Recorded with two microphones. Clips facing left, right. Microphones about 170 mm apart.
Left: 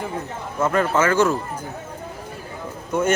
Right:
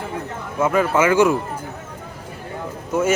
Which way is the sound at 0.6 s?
10° right (ahead or behind).